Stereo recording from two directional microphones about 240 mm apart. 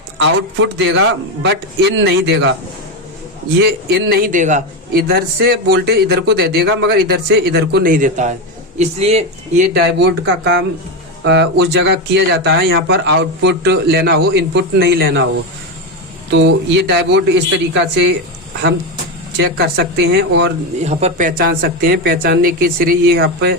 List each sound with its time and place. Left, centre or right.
0.2 s speech: right
3.8 s a man's voice: right
9.7 s speech: right
16.3 s speech: right
19.4 s speech: right
20.8 s a man's voice: right